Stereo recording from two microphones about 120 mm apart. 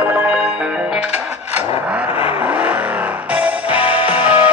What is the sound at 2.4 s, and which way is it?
Music, 10° right (ahead or behind).